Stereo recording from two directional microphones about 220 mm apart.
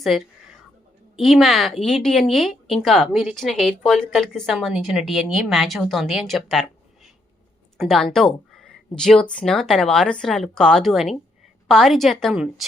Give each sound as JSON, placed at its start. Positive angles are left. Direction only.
{"t": 0.0, "sound": "speech", "side_deg": 0}